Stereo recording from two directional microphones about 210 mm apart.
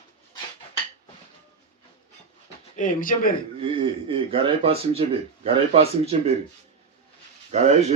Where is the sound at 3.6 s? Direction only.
25° right (ahead or behind).